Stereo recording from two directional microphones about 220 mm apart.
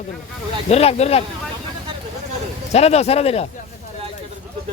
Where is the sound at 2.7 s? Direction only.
30° left (ahead or behind).